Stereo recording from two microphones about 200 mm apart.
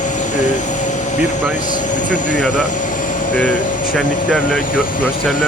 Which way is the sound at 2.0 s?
40° left (ahead or behind).